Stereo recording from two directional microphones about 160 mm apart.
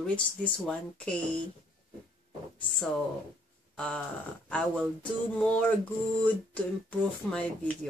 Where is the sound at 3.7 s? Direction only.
5° left (ahead or behind).